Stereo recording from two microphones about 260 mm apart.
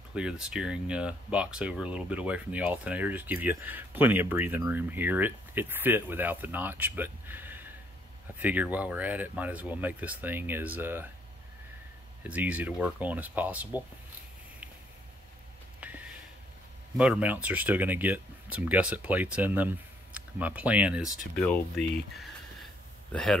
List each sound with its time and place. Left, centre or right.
0.1 s speech: centre
12.2 s speech: centre
15.8 s a sound: centre
16.9 s speech: centre